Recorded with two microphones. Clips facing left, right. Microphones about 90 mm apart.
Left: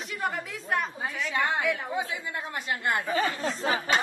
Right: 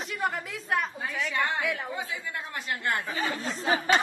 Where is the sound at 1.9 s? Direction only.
15° left (ahead or behind).